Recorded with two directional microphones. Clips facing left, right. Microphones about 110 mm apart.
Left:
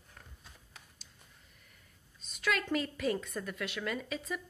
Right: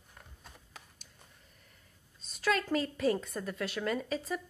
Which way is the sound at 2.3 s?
35° right (ahead or behind).